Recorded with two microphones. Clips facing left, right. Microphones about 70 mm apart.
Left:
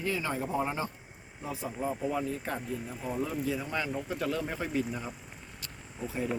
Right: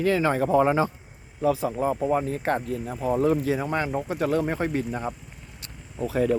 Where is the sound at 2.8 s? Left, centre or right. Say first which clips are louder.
Right 11 dB; right.